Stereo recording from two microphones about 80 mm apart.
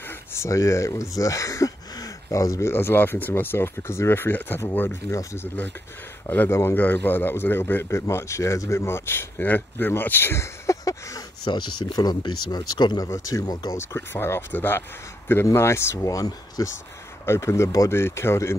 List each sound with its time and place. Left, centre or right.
0.3 s speech: left
2.7 s a man's voice: left
6.5 s a man's voice: left
11.4 s speech: left
13.7 s a man's voice: left
16.0 s speech: left
17.3 s speech: left